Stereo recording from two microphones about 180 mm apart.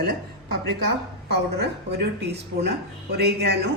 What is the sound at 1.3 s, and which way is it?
Speech, 65° right (ahead or behind).